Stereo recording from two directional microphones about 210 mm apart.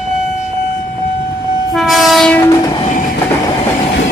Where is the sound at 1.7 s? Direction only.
Centre (ahead or behind).